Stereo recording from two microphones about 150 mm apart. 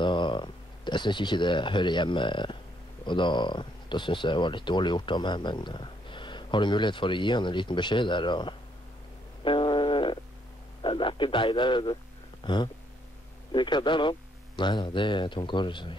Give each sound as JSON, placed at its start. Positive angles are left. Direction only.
{"t": 0.0, "sound": "speech", "side_deg": 30}
{"t": 9.4, "sound": "a sound", "side_deg": 35}
{"t": 10.8, "sound": "speech", "side_deg": 35}